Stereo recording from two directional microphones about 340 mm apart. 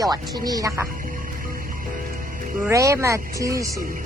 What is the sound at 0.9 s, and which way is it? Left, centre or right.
Music, right.